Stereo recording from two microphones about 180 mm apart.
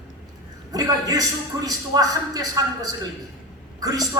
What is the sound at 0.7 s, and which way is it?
A man's voice, 20° right (ahead or behind).